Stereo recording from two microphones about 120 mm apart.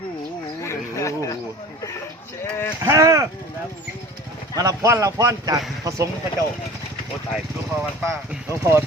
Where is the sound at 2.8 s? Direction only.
25° right (ahead or behind).